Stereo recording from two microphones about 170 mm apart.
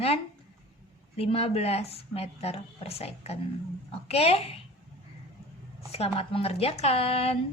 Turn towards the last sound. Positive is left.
turn(degrees=35)  # may be behind; listen again after turning